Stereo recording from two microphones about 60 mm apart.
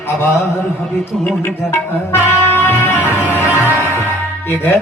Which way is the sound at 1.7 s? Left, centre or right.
Left.